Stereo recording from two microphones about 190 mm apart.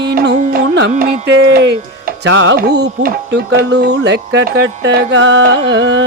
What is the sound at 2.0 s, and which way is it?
Speech, 60° right (ahead or behind).